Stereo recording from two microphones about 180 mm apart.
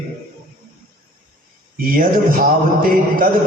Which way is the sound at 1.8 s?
50° right (ahead or behind).